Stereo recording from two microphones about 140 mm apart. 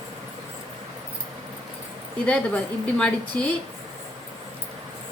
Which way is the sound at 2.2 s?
10° left (ahead or behind).